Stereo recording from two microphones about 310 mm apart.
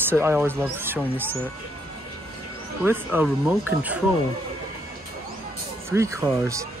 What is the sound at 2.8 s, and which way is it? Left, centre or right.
Speech, centre.